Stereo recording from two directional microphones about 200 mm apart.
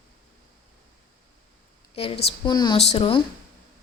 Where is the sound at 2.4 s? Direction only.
20° left (ahead or behind).